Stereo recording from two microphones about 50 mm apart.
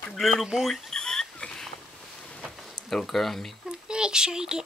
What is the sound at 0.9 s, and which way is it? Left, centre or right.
Rodents, centre.